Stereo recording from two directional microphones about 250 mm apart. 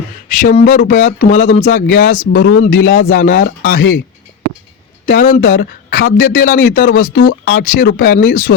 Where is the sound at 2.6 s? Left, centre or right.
Left.